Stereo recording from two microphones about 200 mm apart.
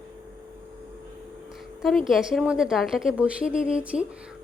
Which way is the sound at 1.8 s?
Centre (ahead or behind).